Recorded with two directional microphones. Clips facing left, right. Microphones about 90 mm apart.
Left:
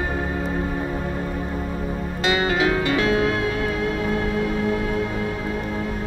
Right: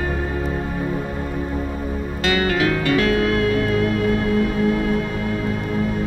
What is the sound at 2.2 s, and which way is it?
Music, 20° left (ahead or behind).